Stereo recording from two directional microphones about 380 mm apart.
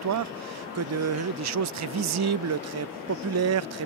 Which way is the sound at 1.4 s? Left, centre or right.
Right.